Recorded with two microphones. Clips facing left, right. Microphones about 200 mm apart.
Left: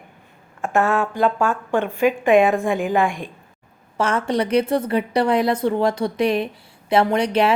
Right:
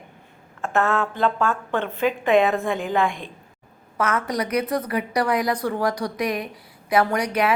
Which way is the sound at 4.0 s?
30° left (ahead or behind).